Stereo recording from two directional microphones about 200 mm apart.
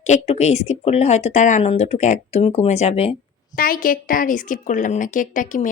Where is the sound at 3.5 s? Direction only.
45° left (ahead or behind).